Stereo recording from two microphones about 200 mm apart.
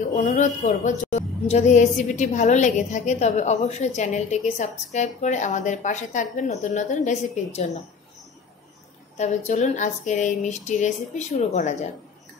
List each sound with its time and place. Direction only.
0.1 s a woman's voice: 45° left (ahead or behind)
9.1 s a woman's voice: 35° left (ahead or behind)